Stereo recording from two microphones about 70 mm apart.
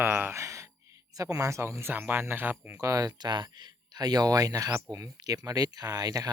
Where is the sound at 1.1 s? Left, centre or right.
Right.